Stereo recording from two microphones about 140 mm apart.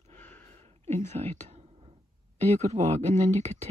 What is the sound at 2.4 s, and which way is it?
Speech, 50° right (ahead or behind).